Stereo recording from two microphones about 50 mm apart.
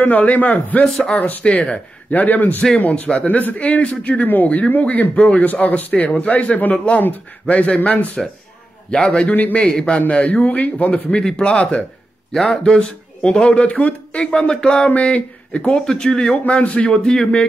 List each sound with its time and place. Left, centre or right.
0.0 s speech: left
0.8 s speech: centre
1.1 s speech: left
2.9 s a man's voice: left
9.3 s speech: left
9.6 s a man's voice: centre
11.2 s a man's voice: centre
14.2 s a man's voice: centre
15.8 s speech: centre
16.4 s a man's voice: left